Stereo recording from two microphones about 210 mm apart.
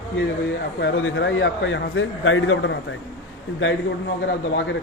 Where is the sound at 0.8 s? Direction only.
60° left (ahead or behind).